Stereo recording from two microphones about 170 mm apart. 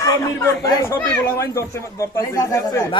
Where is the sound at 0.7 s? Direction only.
15° left (ahead or behind).